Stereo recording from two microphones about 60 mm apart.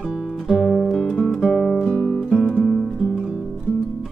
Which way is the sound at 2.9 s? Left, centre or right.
Centre.